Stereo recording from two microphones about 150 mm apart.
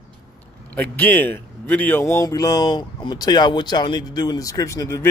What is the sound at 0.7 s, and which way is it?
Speech, 15° left (ahead or behind).